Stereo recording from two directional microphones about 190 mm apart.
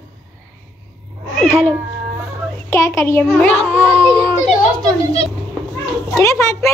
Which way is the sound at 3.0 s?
15° left (ahead or behind).